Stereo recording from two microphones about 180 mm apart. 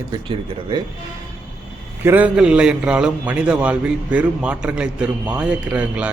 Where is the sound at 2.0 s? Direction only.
10° right (ahead or behind).